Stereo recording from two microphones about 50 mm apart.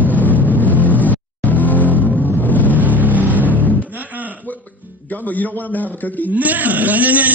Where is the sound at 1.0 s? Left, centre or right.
Left.